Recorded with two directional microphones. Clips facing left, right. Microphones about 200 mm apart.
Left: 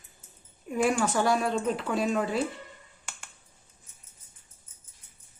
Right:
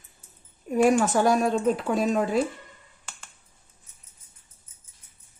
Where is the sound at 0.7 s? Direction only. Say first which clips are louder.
Right 5 dB; 45° right (ahead or behind).